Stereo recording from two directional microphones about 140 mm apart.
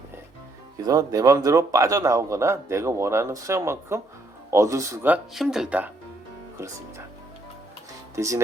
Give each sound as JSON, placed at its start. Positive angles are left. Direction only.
{"t": 0.9, "sound": "a man's voice", "side_deg": -25}
{"t": 5.1, "sound": "speech", "side_deg": -5}
{"t": 6.6, "sound": "speech", "side_deg": -20}
{"t": 8.1, "sound": "speech", "side_deg": -20}